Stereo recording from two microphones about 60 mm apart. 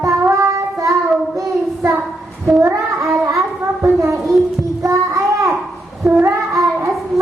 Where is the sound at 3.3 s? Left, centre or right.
Right.